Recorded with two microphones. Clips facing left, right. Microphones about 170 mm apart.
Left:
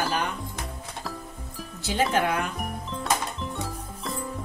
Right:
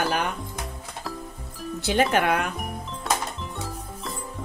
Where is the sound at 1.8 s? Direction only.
65° right (ahead or behind).